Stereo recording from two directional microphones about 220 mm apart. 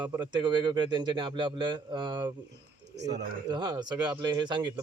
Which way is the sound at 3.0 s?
50° right (ahead or behind).